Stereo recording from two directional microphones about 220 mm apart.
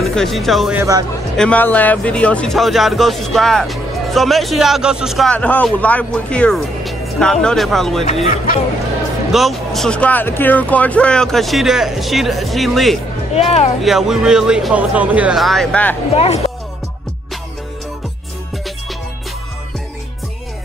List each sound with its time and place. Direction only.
0.0 s speech: centre (ahead or behind)
0.7 s speech: 15° right (ahead or behind)
1.3 s speech: 5° left (ahead or behind)
8.0 s speech: 30° left (ahead or behind)
9.3 s speech: centre (ahead or behind)
16.2 s speech: 30° left (ahead or behind)